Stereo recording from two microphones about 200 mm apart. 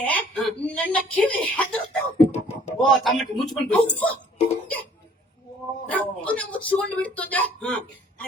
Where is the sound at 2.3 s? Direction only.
35° left (ahead or behind).